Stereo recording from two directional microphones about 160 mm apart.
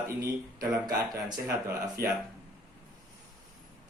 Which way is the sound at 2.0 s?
70° right (ahead or behind).